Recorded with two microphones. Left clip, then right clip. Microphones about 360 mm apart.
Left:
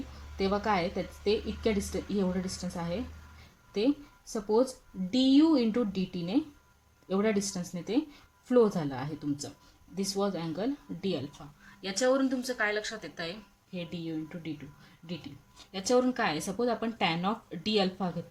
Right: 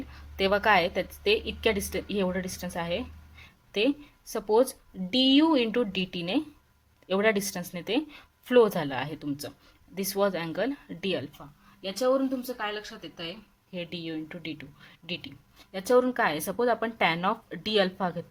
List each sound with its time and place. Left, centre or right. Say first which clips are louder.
0.6 s speech: right 7 dB; right
4.3 s speech: right 3 dB; right
5.1 s speech: right 2 dB; right; by 13.3 s centre
13.7 s speech: right 2 dB; right